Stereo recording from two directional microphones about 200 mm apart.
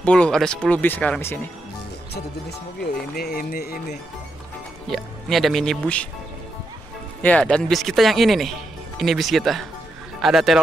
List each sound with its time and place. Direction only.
0.0 s speech: 5° left (ahead or behind)
2.8 s speech: 50° left (ahead or behind)
4.8 s speech: centre (ahead or behind)
7.2 s speech: 5° left (ahead or behind)